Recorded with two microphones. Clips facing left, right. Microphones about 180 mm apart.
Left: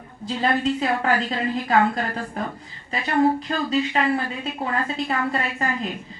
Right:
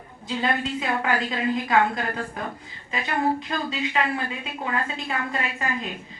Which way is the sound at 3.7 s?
35° left (ahead or behind).